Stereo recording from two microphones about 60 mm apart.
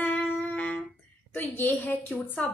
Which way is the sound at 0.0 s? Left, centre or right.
Left.